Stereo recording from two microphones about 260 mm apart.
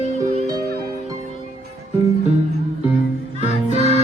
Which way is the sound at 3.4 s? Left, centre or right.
Left.